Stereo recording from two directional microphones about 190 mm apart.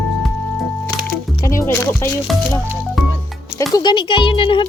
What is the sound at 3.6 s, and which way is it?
Speech, 20° left (ahead or behind).